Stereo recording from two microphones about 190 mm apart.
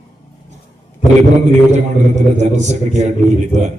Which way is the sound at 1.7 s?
35° right (ahead or behind).